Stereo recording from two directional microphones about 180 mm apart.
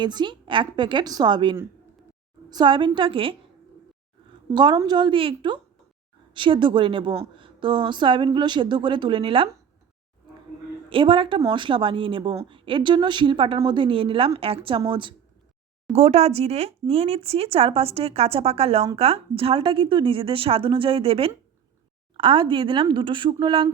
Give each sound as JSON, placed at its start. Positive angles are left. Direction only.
{"t": 0.0, "sound": "a woman's voice", "side_deg": -25}
{"t": 4.5, "sound": "a woman's voice", "side_deg": -25}
{"t": 10.8, "sound": "a woman's voice", "side_deg": -30}